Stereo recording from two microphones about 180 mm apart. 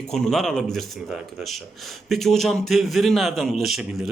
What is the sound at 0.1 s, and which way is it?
A man's voice, 5° left (ahead or behind).